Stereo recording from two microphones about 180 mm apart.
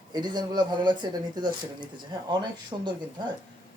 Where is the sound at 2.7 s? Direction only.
25° right (ahead or behind).